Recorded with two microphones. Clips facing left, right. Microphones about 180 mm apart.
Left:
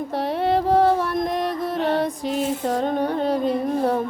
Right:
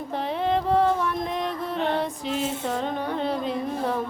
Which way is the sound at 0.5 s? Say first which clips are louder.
Left 4 dB; 40° left (ahead or behind).